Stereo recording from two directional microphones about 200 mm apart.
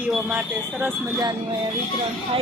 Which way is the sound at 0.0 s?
5° right (ahead or behind).